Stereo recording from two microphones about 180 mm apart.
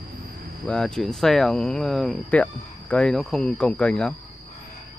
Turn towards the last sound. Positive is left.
turn(degrees=5)  # may be behind; listen again after turning